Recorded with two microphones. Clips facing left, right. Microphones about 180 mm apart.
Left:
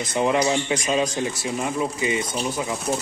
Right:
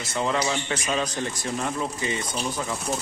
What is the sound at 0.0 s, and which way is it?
Speech, 15° left (ahead or behind).